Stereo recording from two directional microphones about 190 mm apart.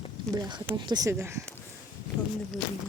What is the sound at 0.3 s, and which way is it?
Speech, 20° right (ahead or behind).